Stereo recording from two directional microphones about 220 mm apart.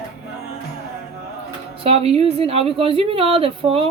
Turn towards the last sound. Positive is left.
turn(degrees=-25)  # may be behind; listen again after turning